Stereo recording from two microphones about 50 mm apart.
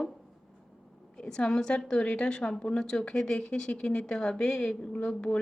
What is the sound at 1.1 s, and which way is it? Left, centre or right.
A woman's voice, centre.